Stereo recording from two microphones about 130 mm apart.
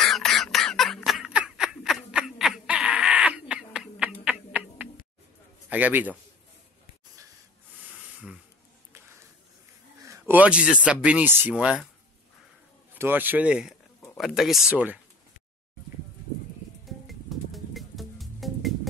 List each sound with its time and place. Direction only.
0.0 s a sound: 5° left (ahead or behind)
5.7 s a man's voice: 15° right (ahead or behind)
10.0 s a sound: 25° right (ahead or behind)
10.3 s speech: 10° right (ahead or behind)
12.9 s speech: 15° right (ahead or behind)
16.8 s music: centre (ahead or behind)